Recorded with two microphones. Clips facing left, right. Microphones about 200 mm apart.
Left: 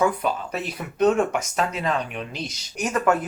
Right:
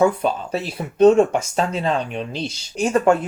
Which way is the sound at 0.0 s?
30° right (ahead or behind).